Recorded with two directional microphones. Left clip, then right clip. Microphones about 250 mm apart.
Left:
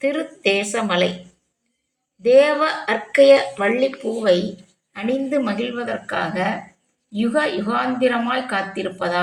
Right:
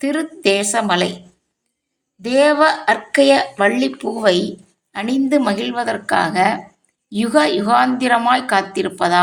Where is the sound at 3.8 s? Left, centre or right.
Right.